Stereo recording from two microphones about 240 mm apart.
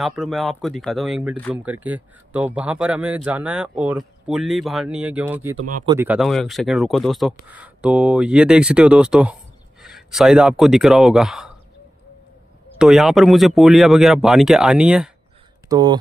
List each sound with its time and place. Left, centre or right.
0.0 s speech: centre
12.7 s speech: centre
15.7 s speech: centre